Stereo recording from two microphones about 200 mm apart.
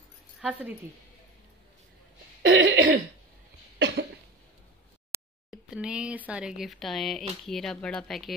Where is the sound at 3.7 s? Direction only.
60° right (ahead or behind).